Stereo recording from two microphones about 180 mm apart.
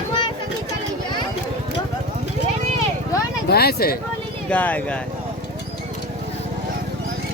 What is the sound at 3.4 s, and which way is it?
Speech, 60° left (ahead or behind).